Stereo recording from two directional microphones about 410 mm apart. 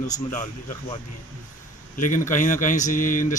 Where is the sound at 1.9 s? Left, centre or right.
Centre.